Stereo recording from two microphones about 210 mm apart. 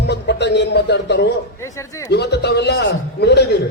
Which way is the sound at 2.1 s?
50° left (ahead or behind).